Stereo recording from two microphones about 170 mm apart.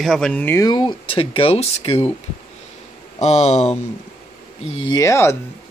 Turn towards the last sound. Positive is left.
turn(degrees=15)  # may be behind; listen again after turning